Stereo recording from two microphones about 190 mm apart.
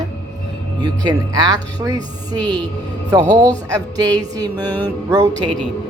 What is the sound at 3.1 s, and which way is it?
Speech, 20° right (ahead or behind).